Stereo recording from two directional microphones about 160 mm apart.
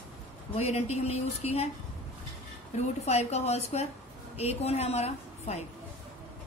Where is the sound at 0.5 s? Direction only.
40° left (ahead or behind).